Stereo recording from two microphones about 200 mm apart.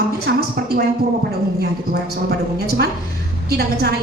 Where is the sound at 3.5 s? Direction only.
50° right (ahead or behind).